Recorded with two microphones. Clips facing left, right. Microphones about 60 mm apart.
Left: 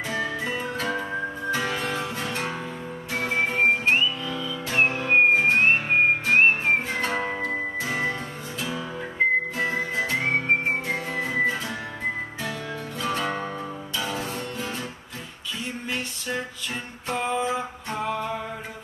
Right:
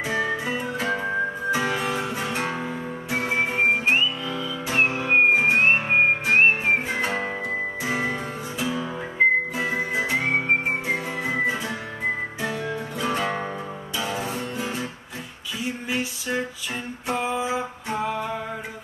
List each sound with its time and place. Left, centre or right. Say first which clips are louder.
0.0 s music: right 3 dB; centre
15.6 s a sound: right 4 dB; centre
17.1 s music: even; centre